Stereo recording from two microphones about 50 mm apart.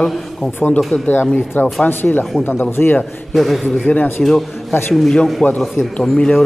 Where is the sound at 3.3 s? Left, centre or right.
Centre.